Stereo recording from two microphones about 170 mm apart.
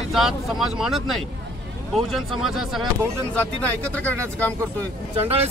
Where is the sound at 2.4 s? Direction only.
Centre (ahead or behind).